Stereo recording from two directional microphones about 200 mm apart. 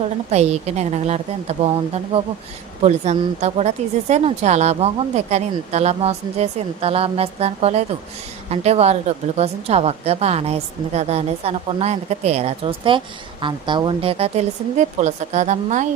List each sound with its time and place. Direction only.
0.3 s a woman's voice: 35° right (ahead or behind)